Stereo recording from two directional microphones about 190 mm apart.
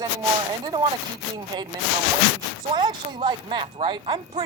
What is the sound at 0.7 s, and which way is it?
Speech, 20° right (ahead or behind).